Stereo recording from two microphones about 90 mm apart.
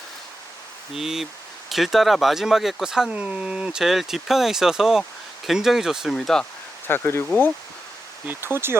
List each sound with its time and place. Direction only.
0.9 s speech: 5° right (ahead or behind)
6.1 s speech: 5° left (ahead or behind)
6.8 s speech: 25° left (ahead or behind)
8.3 s speech: 25° right (ahead or behind)